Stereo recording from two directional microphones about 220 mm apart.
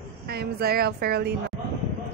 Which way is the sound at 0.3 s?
45° right (ahead or behind).